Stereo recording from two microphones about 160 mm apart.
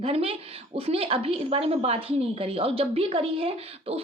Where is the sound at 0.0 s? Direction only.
35° right (ahead or behind).